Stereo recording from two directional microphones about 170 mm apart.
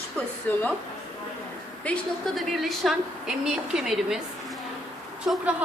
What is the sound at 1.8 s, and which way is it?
A woman's voice, 5° left (ahead or behind).